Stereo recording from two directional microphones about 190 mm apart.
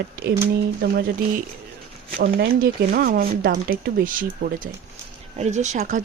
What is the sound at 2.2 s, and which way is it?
Speech, 50° right (ahead or behind).